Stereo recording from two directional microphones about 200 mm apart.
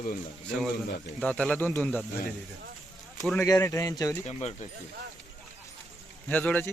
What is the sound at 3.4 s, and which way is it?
Speech, 15° left (ahead or behind).